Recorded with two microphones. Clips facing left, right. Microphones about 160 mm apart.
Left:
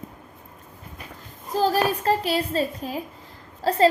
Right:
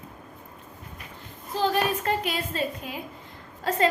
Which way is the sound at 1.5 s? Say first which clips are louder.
Left 3 dB; 35° left (ahead or behind).